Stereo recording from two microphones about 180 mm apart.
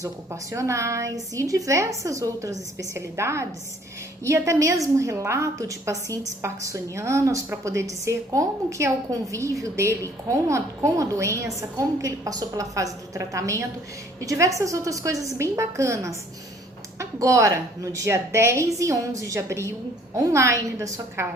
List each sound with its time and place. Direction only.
0.0 s a woman's voice: 15° right (ahead or behind)